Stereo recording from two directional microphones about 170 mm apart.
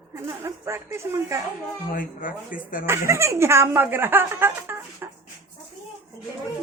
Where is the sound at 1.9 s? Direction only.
55° left (ahead or behind).